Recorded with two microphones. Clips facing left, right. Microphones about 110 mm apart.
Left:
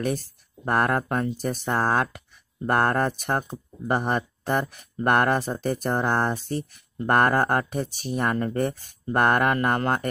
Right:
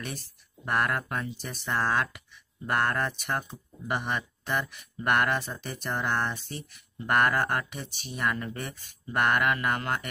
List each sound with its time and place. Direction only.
0.7 s speech: 40° left (ahead or behind)